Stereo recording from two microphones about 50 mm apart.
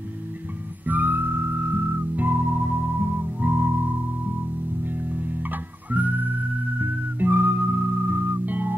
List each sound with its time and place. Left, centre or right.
0.8 s music: right
4.9 s music: right